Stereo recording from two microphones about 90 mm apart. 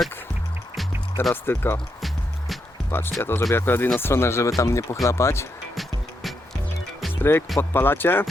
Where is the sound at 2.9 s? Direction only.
25° left (ahead or behind).